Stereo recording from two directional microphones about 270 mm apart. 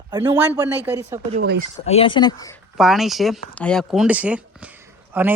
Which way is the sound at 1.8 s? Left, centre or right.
Left.